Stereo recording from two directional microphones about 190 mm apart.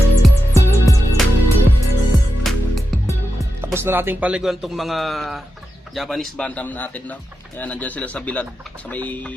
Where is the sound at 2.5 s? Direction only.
Centre (ahead or behind).